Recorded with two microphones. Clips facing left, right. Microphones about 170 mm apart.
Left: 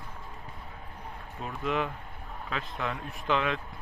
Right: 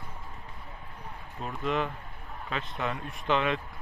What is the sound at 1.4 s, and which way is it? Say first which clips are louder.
Speech: right 1 dB; 5° left (ahead or behind).